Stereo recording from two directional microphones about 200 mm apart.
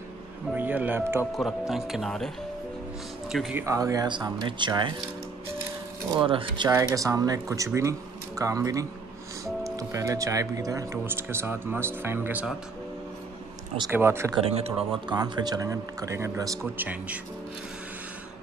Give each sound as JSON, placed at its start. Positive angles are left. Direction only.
{"t": 0.6, "sound": "speech", "side_deg": -10}
{"t": 3.6, "sound": "speech", "side_deg": -15}
{"t": 6.0, "sound": "speech", "side_deg": -25}
{"t": 13.9, "sound": "speech", "side_deg": -10}
{"t": 14.4, "sound": "speech", "side_deg": -30}